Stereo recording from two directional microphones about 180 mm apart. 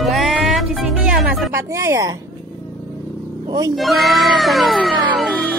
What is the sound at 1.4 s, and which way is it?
Speech, 15° right (ahead or behind).